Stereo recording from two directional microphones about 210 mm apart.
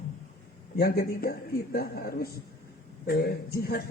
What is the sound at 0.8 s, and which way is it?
Speech, 45° left (ahead or behind).